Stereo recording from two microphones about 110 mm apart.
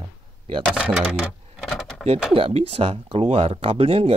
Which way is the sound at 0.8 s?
10° right (ahead or behind).